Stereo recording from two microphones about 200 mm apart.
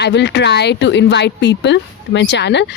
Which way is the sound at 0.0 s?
60° left (ahead or behind).